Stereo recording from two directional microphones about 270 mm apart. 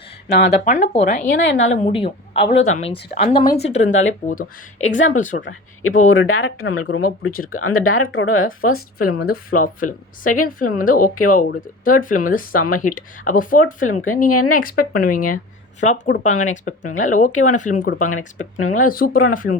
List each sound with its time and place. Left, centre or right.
0.3 s speech: left
0.7 s speech: left
1.5 s speech: left
1.7 s speech: left
4.8 s speech: left
5.1 s speech: left
5.4 s a woman's voice: left
9.5 s speech: left
13.8 s a woman's voice: left
14.5 s speech: left